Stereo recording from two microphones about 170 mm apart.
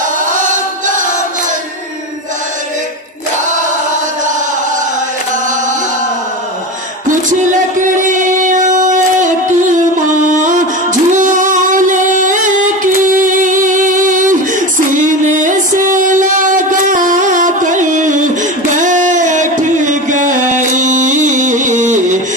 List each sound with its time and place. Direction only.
0.5 s music: 50° right (ahead or behind)
8.1 s music: 50° right (ahead or behind)